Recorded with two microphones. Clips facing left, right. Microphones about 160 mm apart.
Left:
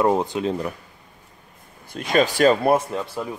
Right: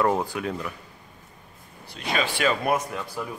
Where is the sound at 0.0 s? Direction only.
20° left (ahead or behind).